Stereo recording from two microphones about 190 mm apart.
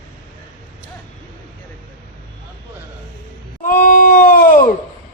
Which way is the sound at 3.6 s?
45° left (ahead or behind).